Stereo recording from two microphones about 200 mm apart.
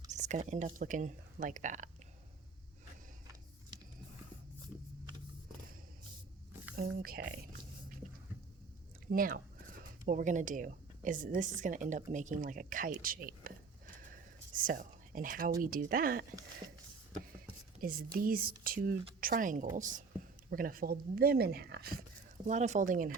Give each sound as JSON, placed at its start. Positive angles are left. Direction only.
{"t": 0.1, "sound": "speech", "side_deg": -35}
{"t": 6.7, "sound": "speech", "side_deg": -50}
{"t": 8.0, "sound": "a sound", "side_deg": -35}
{"t": 9.0, "sound": "speech", "side_deg": -45}
{"t": 17.7, "sound": "speech", "side_deg": -45}
{"t": 22.4, "sound": "speech", "side_deg": -35}